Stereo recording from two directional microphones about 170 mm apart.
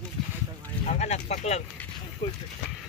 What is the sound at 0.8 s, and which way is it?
Speech, 40° left (ahead or behind).